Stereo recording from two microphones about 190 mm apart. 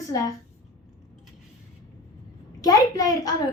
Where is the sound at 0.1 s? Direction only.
15° left (ahead or behind).